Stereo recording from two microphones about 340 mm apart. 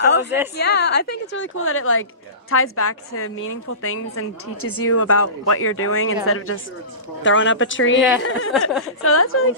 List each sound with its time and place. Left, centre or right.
0.0 s a woman's voice: left